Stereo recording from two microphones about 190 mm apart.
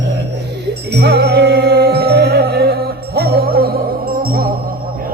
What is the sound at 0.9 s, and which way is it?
Music, 60° right (ahead or behind).